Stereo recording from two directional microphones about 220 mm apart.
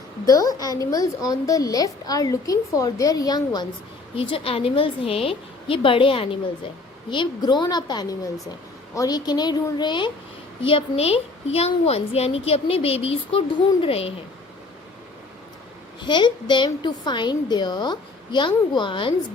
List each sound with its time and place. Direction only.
0.3 s a woman's voice: 15° left (ahead or behind)
16.0 s a woman's voice: 20° left (ahead or behind)